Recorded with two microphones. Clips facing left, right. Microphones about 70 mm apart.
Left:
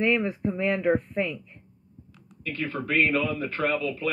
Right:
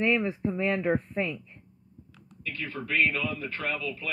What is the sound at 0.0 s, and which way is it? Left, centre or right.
Speech, centre.